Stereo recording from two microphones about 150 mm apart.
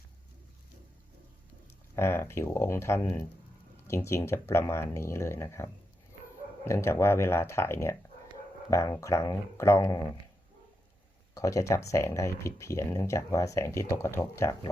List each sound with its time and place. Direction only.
2.0 s speech: 15° left (ahead or behind)
11.3 s speech: 20° left (ahead or behind)